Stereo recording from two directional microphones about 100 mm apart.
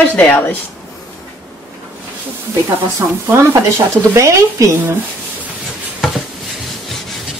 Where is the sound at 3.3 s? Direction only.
25° right (ahead or behind).